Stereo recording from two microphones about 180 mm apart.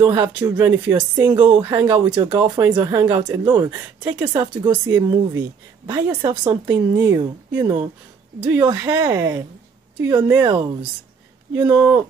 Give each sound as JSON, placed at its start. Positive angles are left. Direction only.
{"t": 0.0, "sound": "speech", "side_deg": -30}
{"t": 0.7, "sound": "speech", "side_deg": -5}
{"t": 1.2, "sound": "speech", "side_deg": -25}
{"t": 1.6, "sound": "speech", "side_deg": -15}
{"t": 1.9, "sound": "speech", "side_deg": -25}
{"t": 10.4, "sound": "speech", "side_deg": -25}
{"t": 11.7, "sound": "speech", "side_deg": -10}